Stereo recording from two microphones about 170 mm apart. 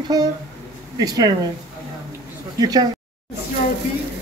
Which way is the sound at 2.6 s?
25° right (ahead or behind).